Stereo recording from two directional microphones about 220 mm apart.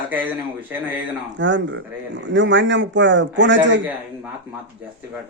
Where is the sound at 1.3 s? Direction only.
55° right (ahead or behind).